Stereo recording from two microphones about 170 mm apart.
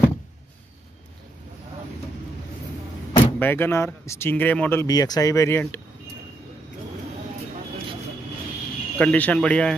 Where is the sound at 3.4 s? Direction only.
10° left (ahead or behind).